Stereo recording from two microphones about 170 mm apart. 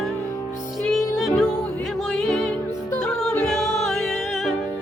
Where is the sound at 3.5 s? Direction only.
Centre (ahead or behind).